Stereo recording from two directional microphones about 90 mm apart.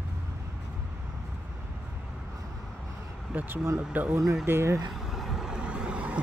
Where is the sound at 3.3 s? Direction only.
25° right (ahead or behind).